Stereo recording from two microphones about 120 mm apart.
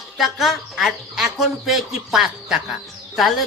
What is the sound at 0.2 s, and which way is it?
Speech, centre (ahead or behind).